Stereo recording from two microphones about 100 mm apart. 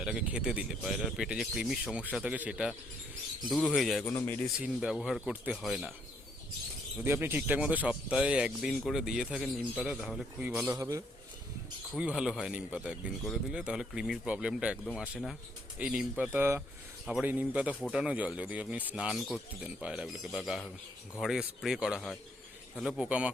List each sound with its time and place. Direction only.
0.0 s speech: 10° right (ahead or behind)
7.0 s speech: 20° right (ahead or behind); by 10.2 s 5° right (ahead or behind)
10.4 s speech: 15° right (ahead or behind)
10.8 s a man's voice: 35° right (ahead or behind)
11.9 s speech: 10° right (ahead or behind)